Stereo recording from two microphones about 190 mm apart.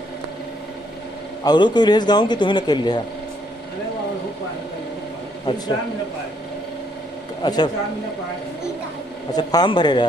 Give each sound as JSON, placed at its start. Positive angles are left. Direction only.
{"t": 1.4, "sound": "a man's voice", "side_deg": 20}
{"t": 7.4, "sound": "a man's voice", "side_deg": 20}
{"t": 9.3, "sound": "a man's voice", "side_deg": 20}